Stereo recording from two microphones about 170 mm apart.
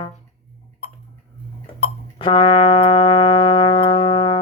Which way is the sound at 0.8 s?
70° left (ahead or behind).